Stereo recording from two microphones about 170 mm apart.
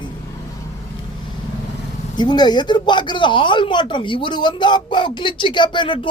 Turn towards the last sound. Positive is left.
turn(degrees=30)  # may be behind; listen again after turning